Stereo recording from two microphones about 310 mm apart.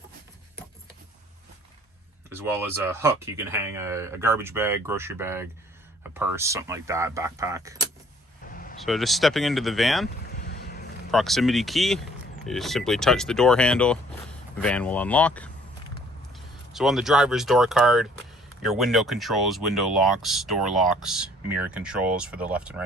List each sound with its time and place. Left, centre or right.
2.3 s speech: centre
8.8 s speech: centre
10.3 s boat: left
11.1 s speech: centre
16.7 s speech: centre